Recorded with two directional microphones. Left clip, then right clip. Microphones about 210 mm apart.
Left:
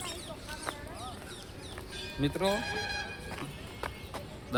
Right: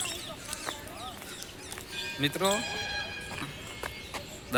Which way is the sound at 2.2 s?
15° left (ahead or behind).